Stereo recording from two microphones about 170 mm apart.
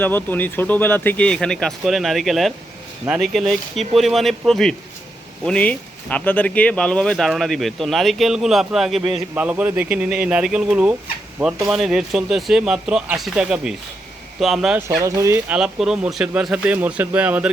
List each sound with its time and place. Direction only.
0.0 s speech: 10° left (ahead or behind)
14.8 s speech: 15° right (ahead or behind)
15.5 s speech: 5° right (ahead or behind)